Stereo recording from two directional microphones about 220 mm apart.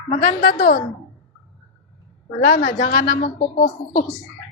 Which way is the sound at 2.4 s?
40° left (ahead or behind).